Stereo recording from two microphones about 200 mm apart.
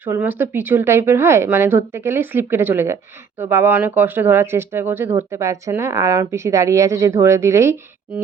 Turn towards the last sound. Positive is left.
turn(degrees=-15)  # may be behind; listen again after turning